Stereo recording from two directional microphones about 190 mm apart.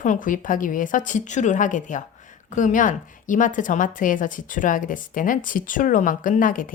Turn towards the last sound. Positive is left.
turn(degrees=45)  # may be behind; listen again after turning